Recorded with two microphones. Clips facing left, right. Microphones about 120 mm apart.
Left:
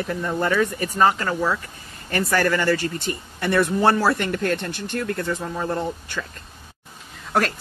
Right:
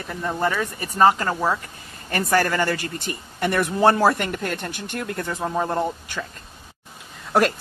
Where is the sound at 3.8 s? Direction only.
40° right (ahead or behind).